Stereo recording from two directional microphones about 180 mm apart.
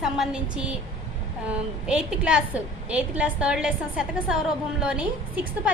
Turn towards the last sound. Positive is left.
turn(degrees=-5)  # may be behind; listen again after turning